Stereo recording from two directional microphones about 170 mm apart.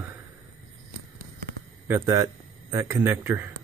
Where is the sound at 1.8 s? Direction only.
15° right (ahead or behind).